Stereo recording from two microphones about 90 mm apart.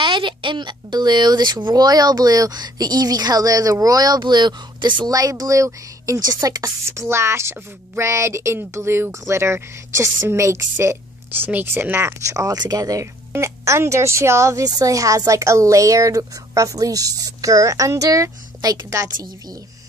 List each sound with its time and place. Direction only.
0.0 s speech: 65° right (ahead or behind); by 13.1 s 40° right (ahead or behind)
13.3 s speech: 30° right (ahead or behind)